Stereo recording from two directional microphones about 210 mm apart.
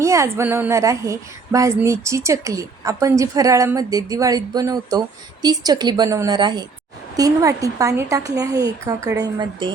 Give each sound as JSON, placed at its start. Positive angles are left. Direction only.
{"t": 0.0, "sound": "a woman's voice", "side_deg": -15}